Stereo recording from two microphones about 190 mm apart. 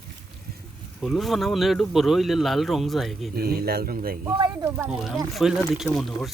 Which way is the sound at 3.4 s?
55° right (ahead or behind).